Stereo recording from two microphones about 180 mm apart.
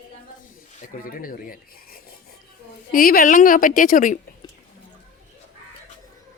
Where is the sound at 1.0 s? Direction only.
50° left (ahead or behind).